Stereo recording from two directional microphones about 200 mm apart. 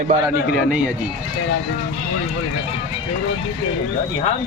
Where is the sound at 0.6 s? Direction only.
5° right (ahead or behind).